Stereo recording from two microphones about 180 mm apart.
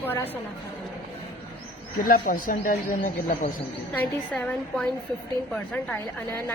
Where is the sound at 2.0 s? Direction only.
55° left (ahead or behind).